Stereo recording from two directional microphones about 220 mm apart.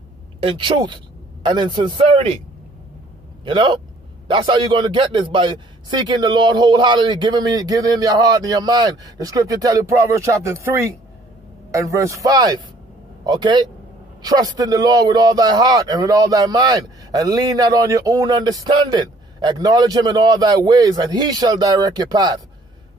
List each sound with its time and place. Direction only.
0.4 s a man's voice: 25° right (ahead or behind)
3.4 s a man's voice: 20° right (ahead or behind)